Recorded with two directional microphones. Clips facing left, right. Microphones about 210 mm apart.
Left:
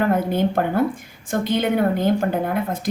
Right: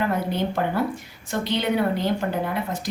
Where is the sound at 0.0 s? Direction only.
50° left (ahead or behind).